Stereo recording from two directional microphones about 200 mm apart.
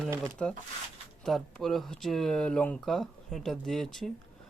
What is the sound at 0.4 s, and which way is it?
Speech, 5° left (ahead or behind).